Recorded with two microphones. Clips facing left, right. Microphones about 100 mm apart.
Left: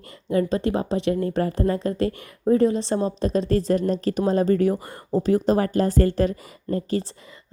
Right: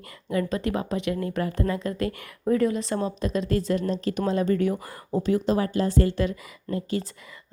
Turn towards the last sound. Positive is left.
turn(degrees=40)  # may be behind; listen again after turning